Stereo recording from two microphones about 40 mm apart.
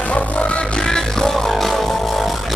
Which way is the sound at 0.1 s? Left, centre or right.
Left.